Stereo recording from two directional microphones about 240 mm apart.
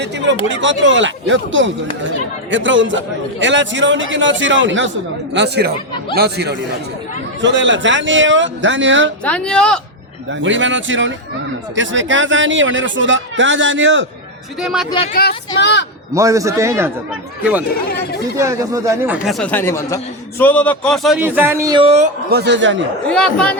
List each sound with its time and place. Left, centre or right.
0.0 s a man's voice: right
9.2 s speech: centre
10.4 s a man's voice: right
14.6 s speech: centre
14.8 s speech: left
15.1 s speech: left
16.1 s a man's voice: centre
18.3 s a man's voice: centre
22.3 s a man's voice: right
23.0 s speech: centre